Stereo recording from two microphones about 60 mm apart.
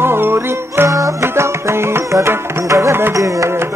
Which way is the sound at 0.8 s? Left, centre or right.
Right.